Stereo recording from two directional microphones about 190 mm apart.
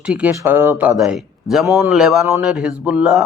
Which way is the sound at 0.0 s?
5° right (ahead or behind).